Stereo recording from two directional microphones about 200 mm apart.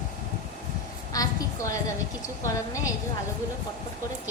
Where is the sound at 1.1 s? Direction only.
15° left (ahead or behind).